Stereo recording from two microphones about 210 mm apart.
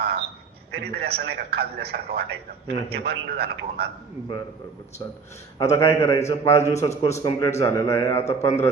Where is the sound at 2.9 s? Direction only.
50° right (ahead or behind).